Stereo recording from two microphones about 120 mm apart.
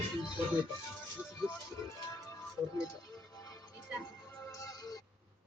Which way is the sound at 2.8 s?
30° left (ahead or behind).